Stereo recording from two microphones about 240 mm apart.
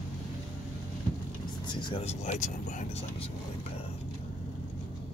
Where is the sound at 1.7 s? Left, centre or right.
Centre.